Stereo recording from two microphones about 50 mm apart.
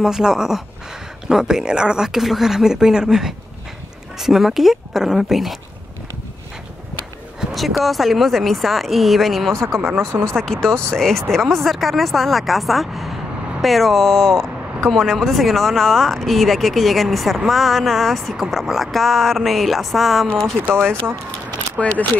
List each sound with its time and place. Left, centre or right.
0.0 s speech: centre
7.5 s speech: centre
9.8 s speech: right
10.2 s speech: centre
21.8 s speech: left